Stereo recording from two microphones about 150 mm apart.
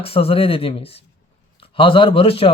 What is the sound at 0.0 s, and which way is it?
Speech, 40° left (ahead or behind).